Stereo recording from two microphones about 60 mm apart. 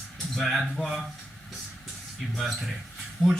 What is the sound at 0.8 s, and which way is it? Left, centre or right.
Speech, right.